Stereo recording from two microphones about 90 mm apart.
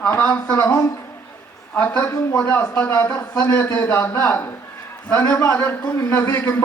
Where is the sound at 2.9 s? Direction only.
30° left (ahead or behind).